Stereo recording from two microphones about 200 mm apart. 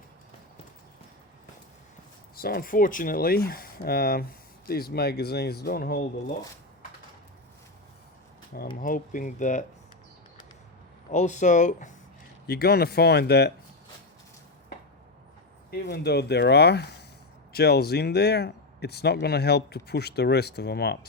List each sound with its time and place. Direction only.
2.3 s speech: 50° left (ahead or behind)
8.8 s speech: 40° left (ahead or behind)
11.1 s speech: 35° left (ahead or behind)
12.5 s speech: 50° left (ahead or behind)
15.9 s speech: 55° left (ahead or behind)